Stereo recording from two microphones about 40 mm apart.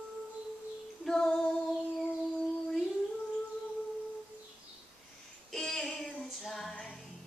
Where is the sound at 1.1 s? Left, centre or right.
Centre.